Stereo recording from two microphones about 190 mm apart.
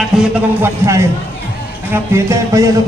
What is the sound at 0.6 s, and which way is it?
A man's voice, 15° right (ahead or behind).